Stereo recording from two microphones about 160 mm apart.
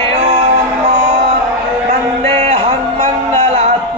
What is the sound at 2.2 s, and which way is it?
Music, 45° right (ahead or behind).